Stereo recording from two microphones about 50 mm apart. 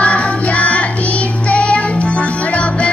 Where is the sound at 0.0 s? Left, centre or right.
Left.